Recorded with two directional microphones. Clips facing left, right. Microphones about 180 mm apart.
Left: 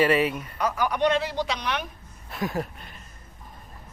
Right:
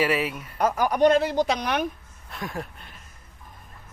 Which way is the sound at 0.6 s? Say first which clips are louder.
Right 4 dB; 45° right (ahead or behind).